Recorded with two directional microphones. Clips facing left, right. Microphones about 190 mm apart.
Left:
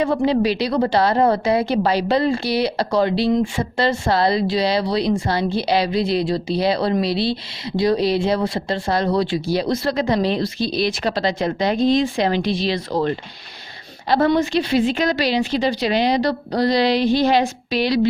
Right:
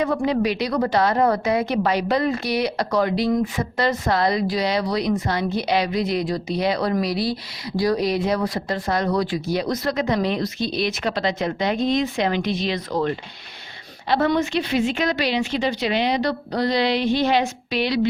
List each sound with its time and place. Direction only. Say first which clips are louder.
0.0 s a woman's voice: left 3 dB; 30° left (ahead or behind)